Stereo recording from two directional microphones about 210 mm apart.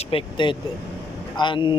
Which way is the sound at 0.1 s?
25° left (ahead or behind).